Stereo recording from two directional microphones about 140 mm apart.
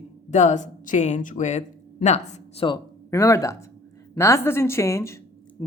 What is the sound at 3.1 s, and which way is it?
A woman's voice, 20° left (ahead or behind).